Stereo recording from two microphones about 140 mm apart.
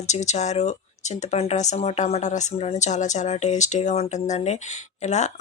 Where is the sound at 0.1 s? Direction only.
55° left (ahead or behind).